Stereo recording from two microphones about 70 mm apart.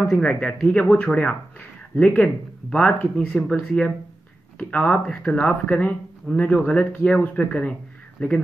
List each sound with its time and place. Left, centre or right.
0.0 s speech: centre
5.0 s speech: centre
5.3 s speech: left